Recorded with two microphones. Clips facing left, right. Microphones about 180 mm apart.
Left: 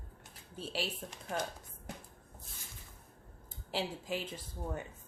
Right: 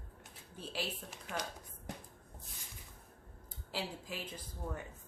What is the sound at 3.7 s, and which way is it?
Speech, 25° left (ahead or behind).